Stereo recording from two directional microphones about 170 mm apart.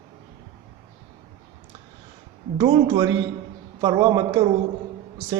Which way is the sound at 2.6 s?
25° right (ahead or behind).